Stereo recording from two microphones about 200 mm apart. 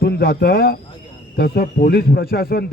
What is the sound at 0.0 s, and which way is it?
Speech, 55° left (ahead or behind).